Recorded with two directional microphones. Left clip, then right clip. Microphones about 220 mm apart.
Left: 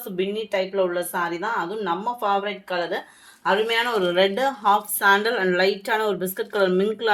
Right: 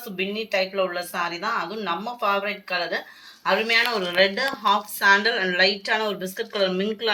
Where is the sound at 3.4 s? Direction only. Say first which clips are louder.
Even; 60° left (ahead or behind).